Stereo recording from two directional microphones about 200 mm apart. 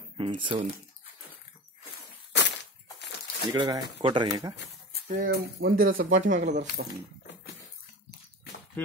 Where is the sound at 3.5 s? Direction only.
20° right (ahead or behind).